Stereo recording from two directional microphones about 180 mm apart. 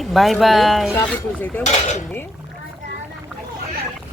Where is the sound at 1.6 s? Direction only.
40° left (ahead or behind).